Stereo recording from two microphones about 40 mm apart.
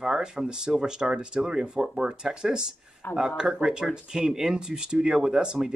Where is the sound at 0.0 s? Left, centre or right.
Centre.